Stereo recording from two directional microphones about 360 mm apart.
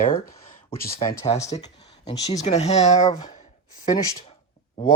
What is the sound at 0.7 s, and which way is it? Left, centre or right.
Speech, centre.